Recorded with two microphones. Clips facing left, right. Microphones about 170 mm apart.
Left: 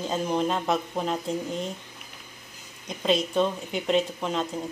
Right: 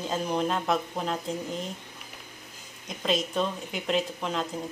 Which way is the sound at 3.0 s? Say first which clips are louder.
Left 4 dB; centre (ahead or behind).